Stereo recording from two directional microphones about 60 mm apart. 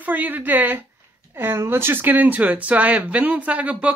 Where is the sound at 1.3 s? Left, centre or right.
Right.